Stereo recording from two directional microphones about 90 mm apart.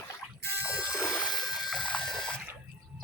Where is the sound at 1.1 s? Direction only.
5° left (ahead or behind).